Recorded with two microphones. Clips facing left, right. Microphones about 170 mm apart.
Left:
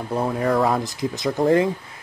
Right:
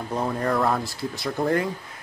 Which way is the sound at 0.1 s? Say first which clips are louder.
Left 4 dB; 5° left (ahead or behind).